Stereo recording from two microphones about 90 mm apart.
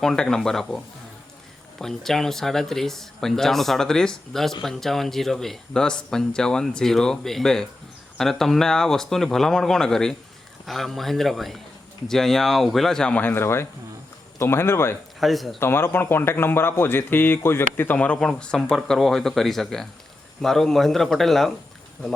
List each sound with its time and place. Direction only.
0.0 s speech: 5° left (ahead or behind)
1.8 s speech: 5° left (ahead or behind); by 14.9 s 25° left (ahead or behind)
15.2 s speech: centre (ahead or behind)
15.5 s speech: 25° left (ahead or behind); by 21.5 s 5° left (ahead or behind)